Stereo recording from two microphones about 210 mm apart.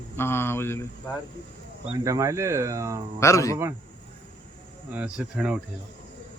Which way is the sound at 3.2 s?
15° left (ahead or behind).